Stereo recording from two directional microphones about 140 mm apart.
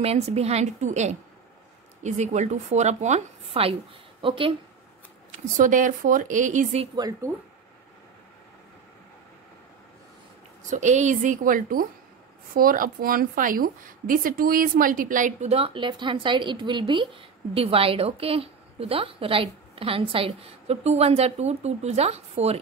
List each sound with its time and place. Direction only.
0.0 s a woman's voice: 50° right (ahead or behind)
5.6 s a woman's voice: 70° right (ahead or behind)
7.0 s speech: 25° right (ahead or behind)
10.7 s a woman's voice: 60° right (ahead or behind)
15.5 s speech: 40° right (ahead or behind)